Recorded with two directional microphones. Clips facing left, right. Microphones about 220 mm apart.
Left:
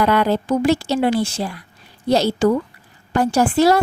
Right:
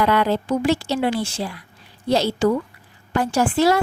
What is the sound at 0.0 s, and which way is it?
A woman's voice, 40° left (ahead or behind).